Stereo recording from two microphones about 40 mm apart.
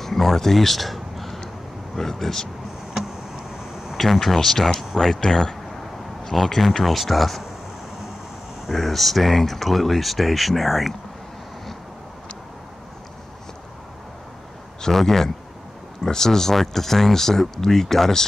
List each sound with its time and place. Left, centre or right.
0.0 s a sound: centre
2.0 s speech: centre
2.9 s a sound: centre
3.9 s speech: centre
6.3 s speech: centre
8.6 s speech: centre
14.9 s speech: centre